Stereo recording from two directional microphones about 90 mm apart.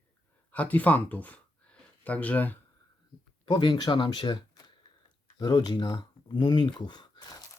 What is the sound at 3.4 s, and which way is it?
Speech, 55° left (ahead or behind).